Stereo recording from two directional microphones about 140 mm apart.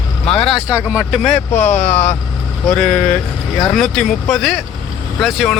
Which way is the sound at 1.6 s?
55° left (ahead or behind).